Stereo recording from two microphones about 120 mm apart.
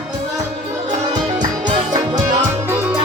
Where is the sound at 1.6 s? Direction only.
35° right (ahead or behind).